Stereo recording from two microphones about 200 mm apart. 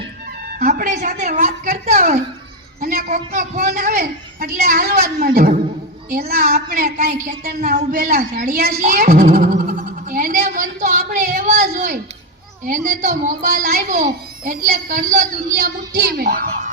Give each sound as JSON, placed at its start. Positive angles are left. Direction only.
{"t": 0.4, "sound": "music", "side_deg": -45}
{"t": 1.0, "sound": "a woman's voice", "side_deg": -40}
{"t": 5.0, "sound": "a child's voice", "side_deg": -50}
{"t": 6.8, "sound": "a woman's voice", "side_deg": -40}